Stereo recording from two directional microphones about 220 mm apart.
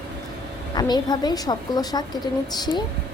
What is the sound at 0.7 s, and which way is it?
A woman's voice, 20° left (ahead or behind).